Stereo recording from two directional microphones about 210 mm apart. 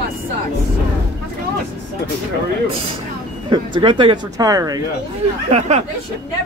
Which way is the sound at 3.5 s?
25° right (ahead or behind).